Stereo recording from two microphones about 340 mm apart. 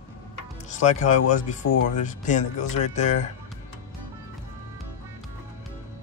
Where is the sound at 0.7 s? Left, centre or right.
Left.